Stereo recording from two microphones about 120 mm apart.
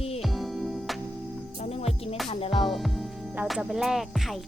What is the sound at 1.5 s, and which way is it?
Music, 60° left (ahead or behind).